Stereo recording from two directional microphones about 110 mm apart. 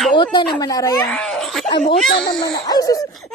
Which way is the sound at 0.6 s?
30° left (ahead or behind).